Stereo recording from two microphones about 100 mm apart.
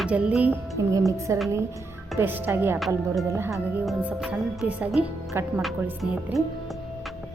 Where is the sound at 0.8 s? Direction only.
35° right (ahead or behind).